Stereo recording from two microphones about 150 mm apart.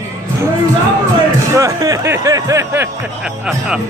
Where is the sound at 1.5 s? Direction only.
20° right (ahead or behind).